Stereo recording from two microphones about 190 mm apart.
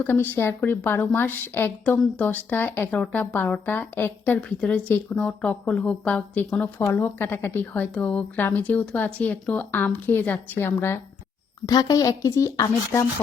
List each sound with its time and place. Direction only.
0.0 s a woman's voice: 10° left (ahead or behind)